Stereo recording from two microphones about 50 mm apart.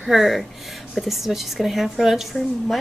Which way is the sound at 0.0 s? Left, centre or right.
Centre.